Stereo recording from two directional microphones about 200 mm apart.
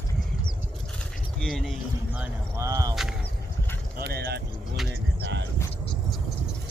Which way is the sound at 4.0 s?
55° right (ahead or behind).